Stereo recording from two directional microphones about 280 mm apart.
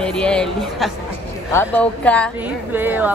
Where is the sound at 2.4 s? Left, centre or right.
Centre.